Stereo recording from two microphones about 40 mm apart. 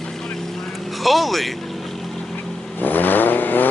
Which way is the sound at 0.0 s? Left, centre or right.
Centre.